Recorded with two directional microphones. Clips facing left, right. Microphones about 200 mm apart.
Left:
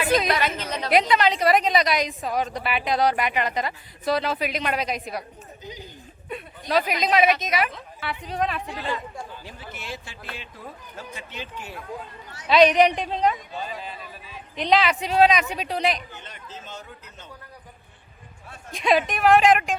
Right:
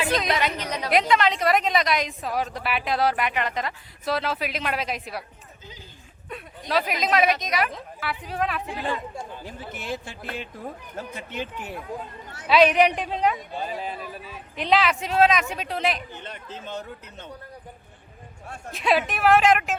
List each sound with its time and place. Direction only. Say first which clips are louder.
0.3 s a woman's voice: even; 15° right (ahead or behind)
0.9 s a woman's voice: left 1 dB; centre (ahead or behind)
6.2 s a woman's voice: left 2 dB; centre (ahead or behind)
9.4 s a man's voice: right 3 dB; 50° right (ahead or behind)
12.5 s a woman's voice: left 1 dB; 5° right (ahead or behind)
14.5 s a woman's voice: left 1 dB; 5° right (ahead or behind)
16.2 s speech: right 4 dB; 60° right (ahead or behind)
18.7 s a woman's voice: left 2 dB; 5° right (ahead or behind)